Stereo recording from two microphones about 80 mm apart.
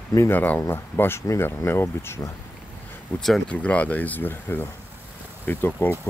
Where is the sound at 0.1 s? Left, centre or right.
Left.